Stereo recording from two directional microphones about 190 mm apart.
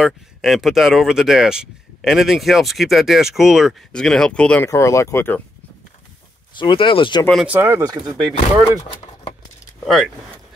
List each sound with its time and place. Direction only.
0.0 s speech: centre (ahead or behind)
4.6 s speech: 15° left (ahead or behind)
6.6 s speech: 25° left (ahead or behind)
7.4 s speech: 10° right (ahead or behind)